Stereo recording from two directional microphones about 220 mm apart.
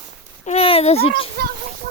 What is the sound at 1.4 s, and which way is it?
Speech, 45° right (ahead or behind).